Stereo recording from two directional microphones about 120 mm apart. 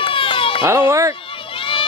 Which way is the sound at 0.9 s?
25° right (ahead or behind).